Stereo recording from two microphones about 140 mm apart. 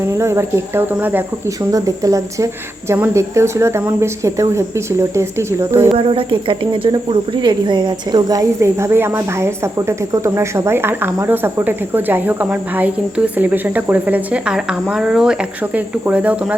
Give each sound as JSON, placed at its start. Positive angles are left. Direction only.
{"t": 0.0, "sound": "speech", "side_deg": -20}
{"t": 5.9, "sound": "speech", "side_deg": -40}